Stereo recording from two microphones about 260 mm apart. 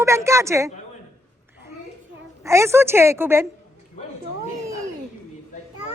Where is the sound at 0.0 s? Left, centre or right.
Centre.